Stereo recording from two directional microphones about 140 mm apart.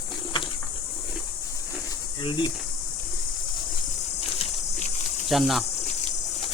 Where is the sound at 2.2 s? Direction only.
35° left (ahead or behind).